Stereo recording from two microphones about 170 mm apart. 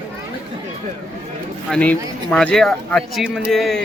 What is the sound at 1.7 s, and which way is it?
Speech, 5° left (ahead or behind).